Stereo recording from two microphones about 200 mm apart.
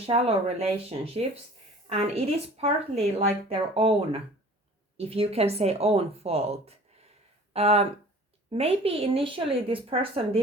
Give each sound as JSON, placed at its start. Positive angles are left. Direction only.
{"t": 0.0, "sound": "speech", "side_deg": -30}